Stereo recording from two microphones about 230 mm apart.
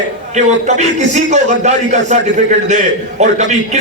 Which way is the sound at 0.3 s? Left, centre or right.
Right.